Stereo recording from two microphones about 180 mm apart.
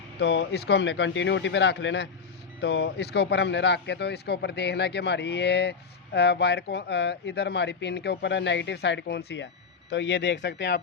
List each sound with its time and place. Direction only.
0.2 s speech: 75° left (ahead or behind)
2.6 s speech: 70° left (ahead or behind)
9.9 s speech: 85° left